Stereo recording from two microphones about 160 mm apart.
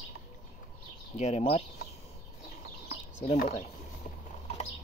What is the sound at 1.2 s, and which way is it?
Speech, 45° left (ahead or behind).